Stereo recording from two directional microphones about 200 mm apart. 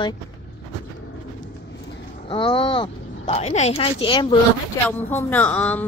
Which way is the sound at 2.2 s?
25° left (ahead or behind).